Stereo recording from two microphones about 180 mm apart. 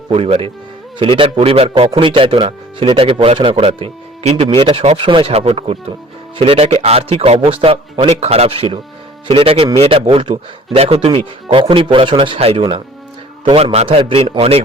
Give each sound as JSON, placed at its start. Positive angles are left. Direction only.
{"t": 0.1, "sound": "a man's voice", "side_deg": -30}